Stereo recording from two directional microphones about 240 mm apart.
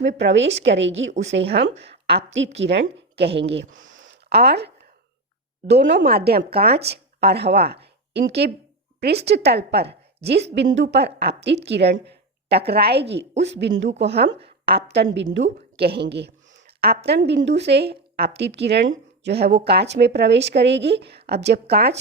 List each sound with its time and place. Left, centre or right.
0.1 s a woman's voice: right
3.2 s speech: right
3.5 s a woman's voice: right